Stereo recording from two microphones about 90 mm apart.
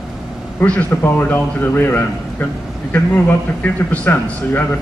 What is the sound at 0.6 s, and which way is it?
A man's voice, 15° left (ahead or behind).